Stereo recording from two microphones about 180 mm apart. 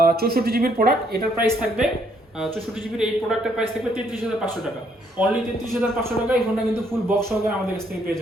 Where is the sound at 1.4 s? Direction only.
5° right (ahead or behind).